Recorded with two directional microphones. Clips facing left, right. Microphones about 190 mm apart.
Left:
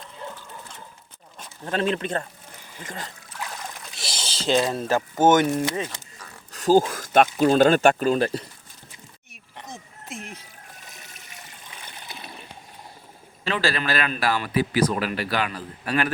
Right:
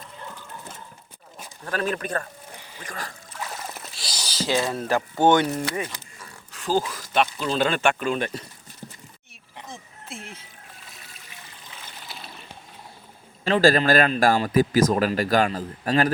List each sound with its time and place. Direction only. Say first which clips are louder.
1.6 s speech: left 2 dB; 25° left (ahead or behind)
6.5 s speech: left 6 dB; 45° left (ahead or behind)
10.1 s speech: left 2 dB; 40° left (ahead or behind)
13.4 s a man's voice: right 7 dB; 45° right (ahead or behind)